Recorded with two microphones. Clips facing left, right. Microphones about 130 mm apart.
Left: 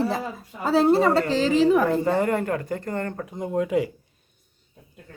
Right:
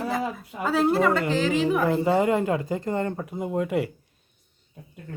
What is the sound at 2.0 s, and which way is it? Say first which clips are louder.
Speech: right 1 dB; 15° right (ahead or behind).